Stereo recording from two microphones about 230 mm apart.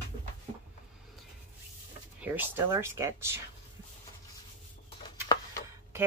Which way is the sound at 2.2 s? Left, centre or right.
Centre.